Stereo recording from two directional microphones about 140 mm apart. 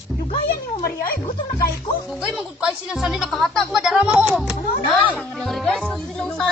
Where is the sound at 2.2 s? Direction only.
5° right (ahead or behind).